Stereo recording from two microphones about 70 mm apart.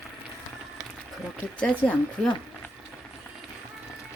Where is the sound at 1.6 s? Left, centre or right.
Centre.